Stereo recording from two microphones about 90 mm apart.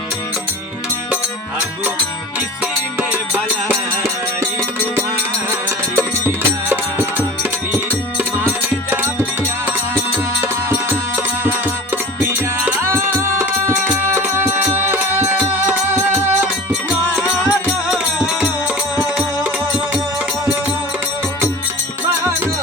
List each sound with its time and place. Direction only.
3.0 s music: 20° right (ahead or behind)
6.0 s music: 25° right (ahead or behind)
12.8 s music: 30° right (ahead or behind)